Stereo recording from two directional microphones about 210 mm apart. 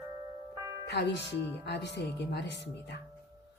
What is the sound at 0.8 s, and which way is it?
Music, 55° left (ahead or behind).